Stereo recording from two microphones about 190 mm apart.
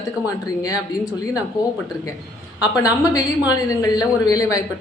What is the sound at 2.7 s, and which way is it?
Speech, 15° left (ahead or behind).